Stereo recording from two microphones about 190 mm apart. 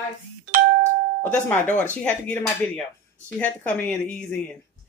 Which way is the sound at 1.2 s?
10° left (ahead or behind).